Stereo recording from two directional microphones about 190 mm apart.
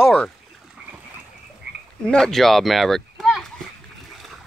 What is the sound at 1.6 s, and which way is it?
Frog, 60° right (ahead or behind).